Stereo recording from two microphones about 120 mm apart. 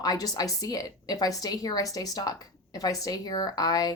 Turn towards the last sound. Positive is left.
turn(degrees=35)  # may be behind; listen again after turning